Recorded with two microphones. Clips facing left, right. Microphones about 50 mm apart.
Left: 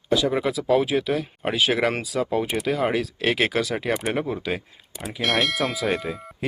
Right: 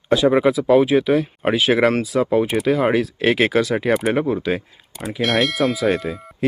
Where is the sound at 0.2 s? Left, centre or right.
Right.